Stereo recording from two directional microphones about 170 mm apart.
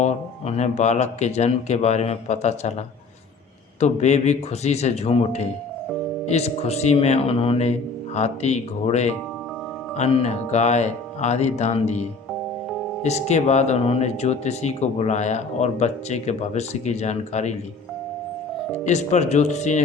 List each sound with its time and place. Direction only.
0.0 s speech: 40° left (ahead or behind)
3.8 s speech: 40° left (ahead or behind)
18.9 s speech: 45° left (ahead or behind)